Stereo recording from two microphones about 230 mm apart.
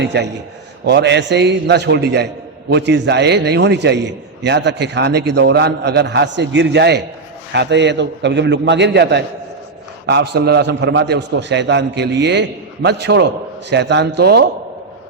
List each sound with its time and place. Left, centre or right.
0.0 s a man's voice: right